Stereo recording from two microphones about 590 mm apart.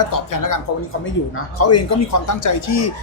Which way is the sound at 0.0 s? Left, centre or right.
Left.